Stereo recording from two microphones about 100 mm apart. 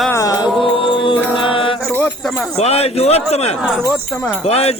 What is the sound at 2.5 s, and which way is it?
Speech, 90° left.